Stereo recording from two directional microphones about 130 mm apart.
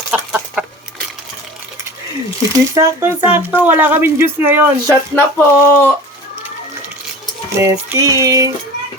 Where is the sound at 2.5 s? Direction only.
25° right (ahead or behind).